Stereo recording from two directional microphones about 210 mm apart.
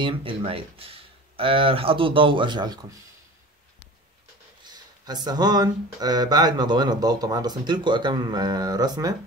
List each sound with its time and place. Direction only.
0.0 s speech: 25° right (ahead or behind)
4.6 s speech: 20° right (ahead or behind)